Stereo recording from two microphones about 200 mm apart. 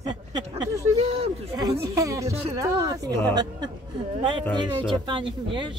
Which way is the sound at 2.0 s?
15° right (ahead or behind).